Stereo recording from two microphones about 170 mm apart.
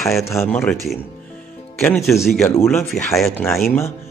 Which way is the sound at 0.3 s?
15° left (ahead or behind).